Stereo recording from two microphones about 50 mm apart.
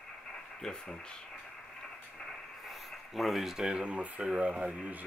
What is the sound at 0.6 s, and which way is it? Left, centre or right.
Speech, centre.